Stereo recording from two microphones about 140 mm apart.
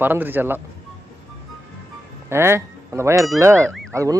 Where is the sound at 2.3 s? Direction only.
20° right (ahead or behind).